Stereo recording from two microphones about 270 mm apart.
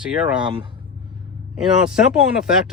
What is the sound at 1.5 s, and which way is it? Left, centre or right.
Speech, centre.